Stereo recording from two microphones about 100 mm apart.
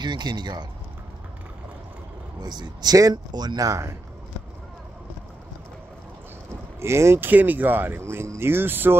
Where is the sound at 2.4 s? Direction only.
45° right (ahead or behind).